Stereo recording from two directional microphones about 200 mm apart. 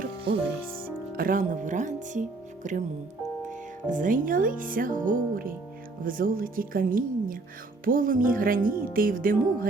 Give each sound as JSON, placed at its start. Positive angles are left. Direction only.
{"t": 1.1, "sound": "speech", "side_deg": -45}
{"t": 3.5, "sound": "music", "side_deg": -40}